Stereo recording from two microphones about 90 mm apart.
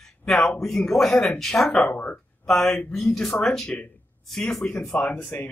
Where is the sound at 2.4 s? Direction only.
5° left (ahead or behind).